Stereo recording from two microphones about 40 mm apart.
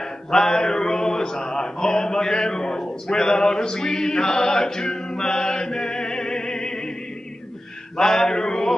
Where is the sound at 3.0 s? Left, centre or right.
Centre.